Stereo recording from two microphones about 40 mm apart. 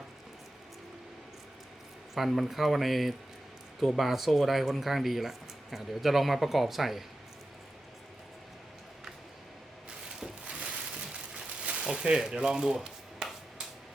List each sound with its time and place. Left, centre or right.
2.1 s speech: centre
10.8 s a sound: right
12.0 s speech: centre